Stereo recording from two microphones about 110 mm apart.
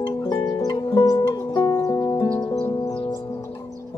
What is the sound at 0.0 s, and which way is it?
Music, 40° left (ahead or behind).